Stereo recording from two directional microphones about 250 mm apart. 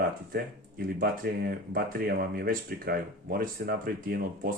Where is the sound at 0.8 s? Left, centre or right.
Right.